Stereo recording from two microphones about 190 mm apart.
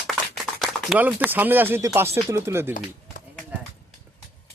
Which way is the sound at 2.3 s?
10° right (ahead or behind).